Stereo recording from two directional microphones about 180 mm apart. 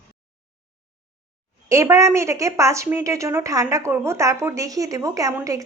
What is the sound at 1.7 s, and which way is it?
Speech, 15° right (ahead or behind).